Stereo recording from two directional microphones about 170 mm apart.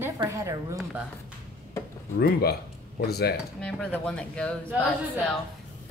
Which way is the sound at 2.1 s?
70° left (ahead or behind).